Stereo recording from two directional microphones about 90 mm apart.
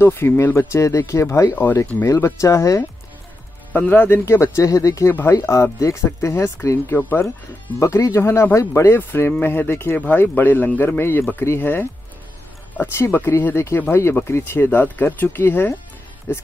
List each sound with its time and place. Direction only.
0.0 s speech: 25° left (ahead or behind)
2.0 s speech: 35° left (ahead or behind)
3.7 s speech: 20° left (ahead or behind)